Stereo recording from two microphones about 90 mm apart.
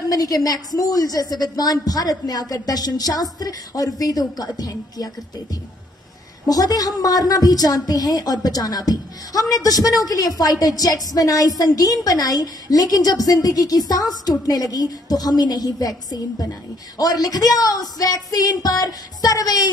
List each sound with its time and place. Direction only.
0.1 s a woman's voice: 45° left (ahead or behind)
6.4 s a woman's voice: 45° left (ahead or behind)